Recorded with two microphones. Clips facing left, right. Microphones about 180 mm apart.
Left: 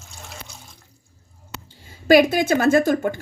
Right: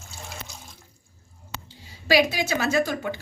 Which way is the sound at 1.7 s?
50° left (ahead or behind).